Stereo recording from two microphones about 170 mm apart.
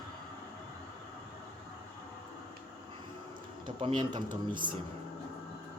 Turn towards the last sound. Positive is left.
turn(degrees=-30)  # may be behind; listen again after turning